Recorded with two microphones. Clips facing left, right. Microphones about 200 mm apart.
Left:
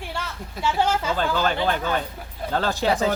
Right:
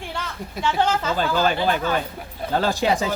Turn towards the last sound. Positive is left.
turn(degrees=-10)  # may be behind; listen again after turning